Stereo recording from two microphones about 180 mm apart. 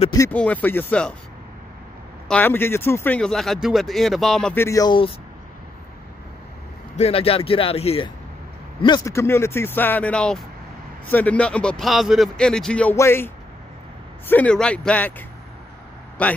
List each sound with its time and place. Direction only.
0.3 s speech: 10° left (ahead or behind)
2.2 s speech: 10° left (ahead or behind)
4.6 s speech: 20° left (ahead or behind)
7.0 s speech: 30° left (ahead or behind)
8.8 s speech: 20° left (ahead or behind)
14.3 s speech: 5° left (ahead or behind)